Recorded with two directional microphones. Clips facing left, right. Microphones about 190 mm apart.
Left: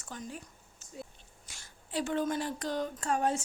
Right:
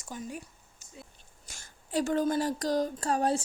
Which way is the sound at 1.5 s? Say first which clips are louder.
Right 5 dB; 45° right (ahead or behind).